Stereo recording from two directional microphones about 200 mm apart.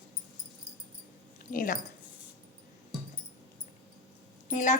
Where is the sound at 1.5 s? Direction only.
45° left (ahead or behind).